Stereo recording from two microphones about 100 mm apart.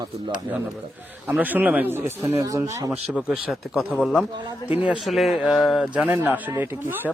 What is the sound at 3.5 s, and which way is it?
Speech, centre (ahead or behind).